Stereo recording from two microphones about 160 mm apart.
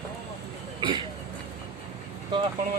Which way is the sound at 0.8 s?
30° right (ahead or behind).